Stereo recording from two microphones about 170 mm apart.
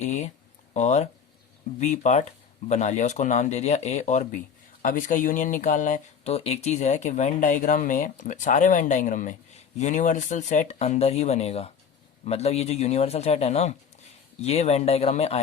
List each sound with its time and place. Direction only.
0.0 s speech: 45° left (ahead or behind)